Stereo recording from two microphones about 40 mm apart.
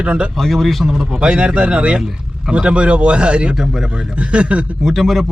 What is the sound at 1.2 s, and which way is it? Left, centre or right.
Speech, right.